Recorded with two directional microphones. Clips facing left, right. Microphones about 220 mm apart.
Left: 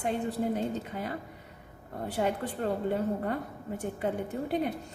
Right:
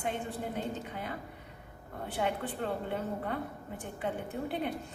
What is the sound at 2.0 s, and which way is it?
A woman's voice, 40° left (ahead or behind).